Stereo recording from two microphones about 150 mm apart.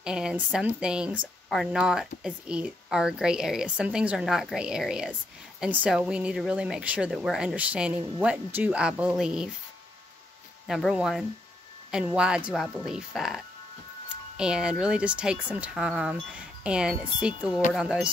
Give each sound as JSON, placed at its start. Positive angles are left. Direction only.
{"t": 0.0, "sound": "speech", "side_deg": -5}
{"t": 10.7, "sound": "speech", "side_deg": 0}